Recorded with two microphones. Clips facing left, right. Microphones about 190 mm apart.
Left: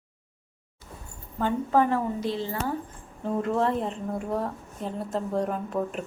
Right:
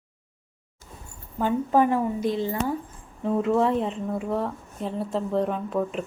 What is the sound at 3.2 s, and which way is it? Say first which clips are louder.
A woman's voice: right 4 dB; centre (ahead or behind).